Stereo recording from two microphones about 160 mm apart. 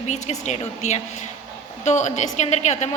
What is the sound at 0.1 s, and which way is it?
A woman's voice, 45° left (ahead or behind).